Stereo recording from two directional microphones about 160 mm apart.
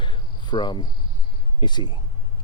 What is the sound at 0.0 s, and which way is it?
Cricket, 30° left (ahead or behind).